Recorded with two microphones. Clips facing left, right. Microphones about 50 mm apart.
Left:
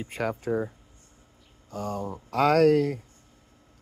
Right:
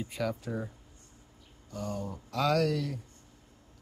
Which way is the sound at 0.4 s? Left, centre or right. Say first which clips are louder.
Left 9 dB; left.